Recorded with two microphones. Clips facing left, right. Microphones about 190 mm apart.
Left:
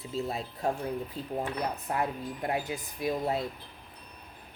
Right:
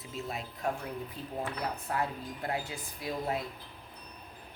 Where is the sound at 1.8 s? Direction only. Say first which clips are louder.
Left 3 dB; 20° left (ahead or behind).